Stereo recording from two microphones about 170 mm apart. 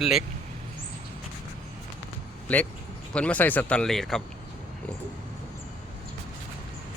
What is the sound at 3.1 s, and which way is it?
Speech, 10° left (ahead or behind).